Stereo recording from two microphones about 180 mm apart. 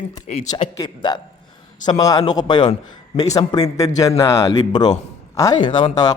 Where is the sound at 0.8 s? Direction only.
25° left (ahead or behind).